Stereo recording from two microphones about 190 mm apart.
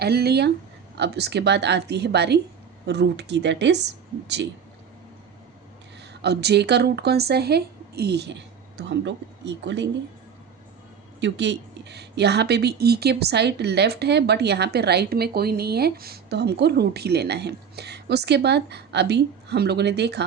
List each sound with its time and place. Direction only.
0.0 s speech: 55° right (ahead or behind)
6.2 s speech: 60° right (ahead or behind)
11.2 s speech: 65° right (ahead or behind)